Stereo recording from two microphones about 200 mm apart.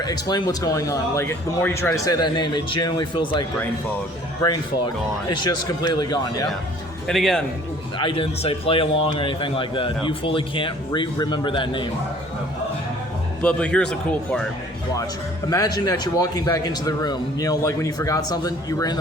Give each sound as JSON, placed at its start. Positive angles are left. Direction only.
{"t": 0.0, "sound": "speech", "side_deg": 20}
{"t": 5.3, "sound": "speech", "side_deg": 20}
{"t": 7.1, "sound": "speech", "side_deg": 0}
{"t": 7.9, "sound": "speech", "side_deg": 25}
{"t": 13.4, "sound": "speech", "side_deg": 5}
{"t": 15.4, "sound": "a man's voice", "side_deg": 20}